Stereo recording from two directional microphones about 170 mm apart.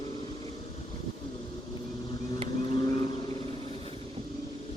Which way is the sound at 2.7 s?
25° left (ahead or behind).